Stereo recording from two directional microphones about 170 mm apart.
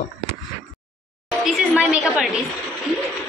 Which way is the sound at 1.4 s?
5° right (ahead or behind).